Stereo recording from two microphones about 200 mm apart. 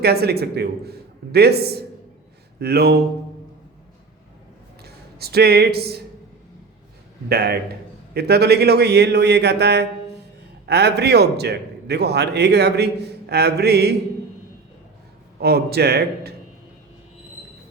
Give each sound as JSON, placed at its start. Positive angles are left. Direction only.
{"t": 0.0, "sound": "a man's voice", "side_deg": -55}
{"t": 4.8, "sound": "speech", "side_deg": -50}
{"t": 7.3, "sound": "a man's voice", "side_deg": -55}
{"t": 15.4, "sound": "a man's voice", "side_deg": -55}